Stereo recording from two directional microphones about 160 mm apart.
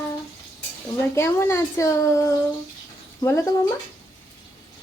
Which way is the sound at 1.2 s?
15° left (ahead or behind).